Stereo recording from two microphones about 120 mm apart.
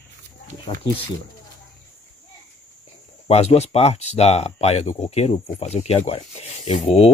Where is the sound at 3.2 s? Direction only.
60° left (ahead or behind).